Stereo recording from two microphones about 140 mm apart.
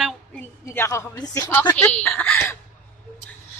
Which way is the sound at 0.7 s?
20° left (ahead or behind).